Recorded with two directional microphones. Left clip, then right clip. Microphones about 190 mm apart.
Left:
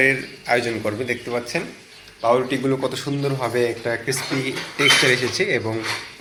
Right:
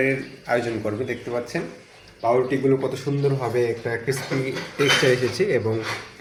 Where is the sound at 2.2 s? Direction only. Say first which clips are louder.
Left 1 dB; centre (ahead or behind).